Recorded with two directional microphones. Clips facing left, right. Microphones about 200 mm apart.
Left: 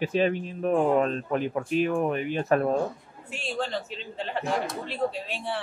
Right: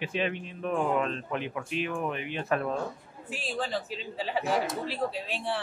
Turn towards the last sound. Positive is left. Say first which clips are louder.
# even
turn(degrees=0)  # may be behind; listen again after turning